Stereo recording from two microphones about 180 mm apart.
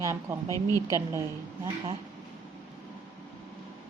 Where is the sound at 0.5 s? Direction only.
20° left (ahead or behind).